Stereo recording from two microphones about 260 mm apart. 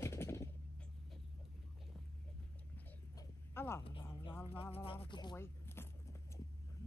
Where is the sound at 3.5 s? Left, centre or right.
Centre.